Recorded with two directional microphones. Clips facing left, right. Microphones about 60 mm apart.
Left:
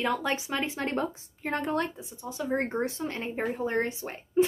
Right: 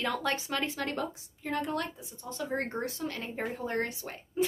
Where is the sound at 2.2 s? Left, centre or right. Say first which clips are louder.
Left 4 dB; centre.